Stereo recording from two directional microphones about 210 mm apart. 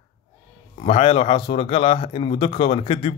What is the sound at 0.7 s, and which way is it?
Speech, 30° left (ahead or behind).